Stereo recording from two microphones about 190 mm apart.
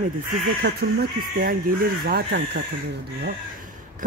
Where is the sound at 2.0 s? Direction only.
60° right (ahead or behind).